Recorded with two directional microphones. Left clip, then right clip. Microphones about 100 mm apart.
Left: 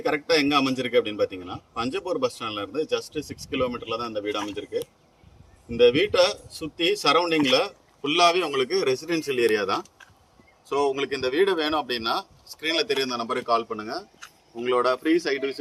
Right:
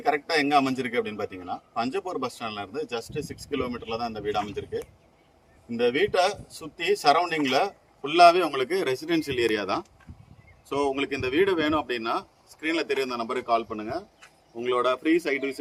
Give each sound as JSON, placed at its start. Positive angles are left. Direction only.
{"t": 0.0, "sound": "a man's voice", "side_deg": -70}
{"t": 9.0, "sound": "speech", "side_deg": -50}
{"t": 10.7, "sound": "speech", "side_deg": -15}